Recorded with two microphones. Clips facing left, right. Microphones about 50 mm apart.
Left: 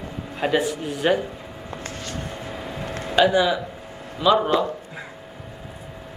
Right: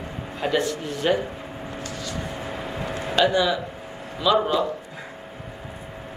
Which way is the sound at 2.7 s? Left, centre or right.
Right.